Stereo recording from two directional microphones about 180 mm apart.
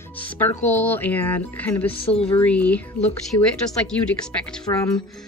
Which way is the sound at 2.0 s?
30° left (ahead or behind).